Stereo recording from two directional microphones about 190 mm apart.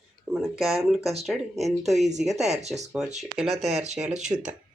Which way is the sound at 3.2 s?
Centre (ahead or behind).